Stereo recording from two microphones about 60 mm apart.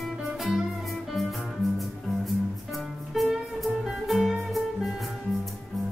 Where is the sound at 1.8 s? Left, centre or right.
Centre.